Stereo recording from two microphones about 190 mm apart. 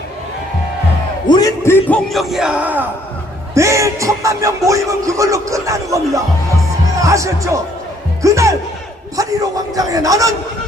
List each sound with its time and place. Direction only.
1.3 s a man's voice: 20° left (ahead or behind)
2.0 s speech: centre (ahead or behind); by 10.3 s 15° right (ahead or behind)